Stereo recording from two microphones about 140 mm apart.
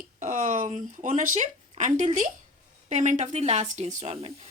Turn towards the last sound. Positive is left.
turn(degrees=-60)  # may be behind; listen again after turning